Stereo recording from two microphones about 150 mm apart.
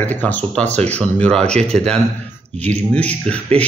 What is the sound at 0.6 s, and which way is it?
Speech, 50° right (ahead or behind).